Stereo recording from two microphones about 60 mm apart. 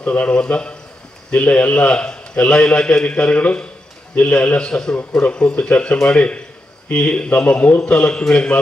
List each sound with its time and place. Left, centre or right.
0.0 s a man's voice: left